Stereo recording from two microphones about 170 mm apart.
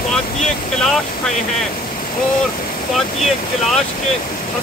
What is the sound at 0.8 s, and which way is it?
Speech, 5° left (ahead or behind).